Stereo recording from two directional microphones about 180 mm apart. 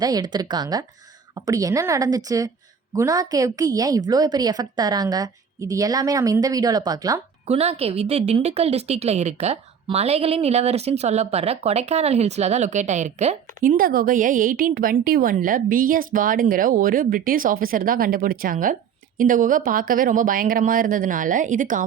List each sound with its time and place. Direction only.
0.0 s a woman's voice: 20° right (ahead or behind)
7.4 s a woman's voice: 35° right (ahead or behind)